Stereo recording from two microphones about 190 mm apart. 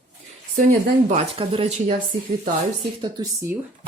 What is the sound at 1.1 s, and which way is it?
Speech, 30° right (ahead or behind).